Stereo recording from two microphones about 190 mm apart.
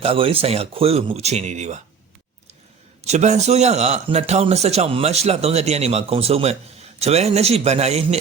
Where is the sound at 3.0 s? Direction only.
35° right (ahead or behind).